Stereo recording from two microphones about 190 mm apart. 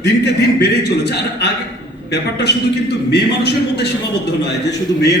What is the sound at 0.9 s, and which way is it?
A man's voice, 60° left (ahead or behind).